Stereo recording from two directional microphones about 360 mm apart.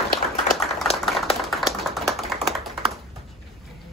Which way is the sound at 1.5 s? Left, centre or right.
Centre.